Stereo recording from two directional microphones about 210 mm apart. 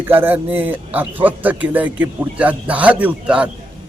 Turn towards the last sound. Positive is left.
turn(degrees=-5)  # may be behind; listen again after turning